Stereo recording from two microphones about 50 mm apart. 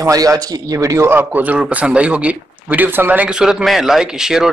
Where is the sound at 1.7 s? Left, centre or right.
Right.